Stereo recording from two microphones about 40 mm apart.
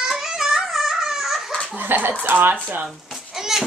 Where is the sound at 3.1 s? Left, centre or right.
Centre.